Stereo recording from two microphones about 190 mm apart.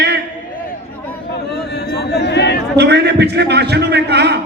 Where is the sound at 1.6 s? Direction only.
60° left (ahead or behind).